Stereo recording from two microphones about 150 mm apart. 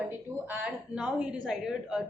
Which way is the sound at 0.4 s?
10° right (ahead or behind).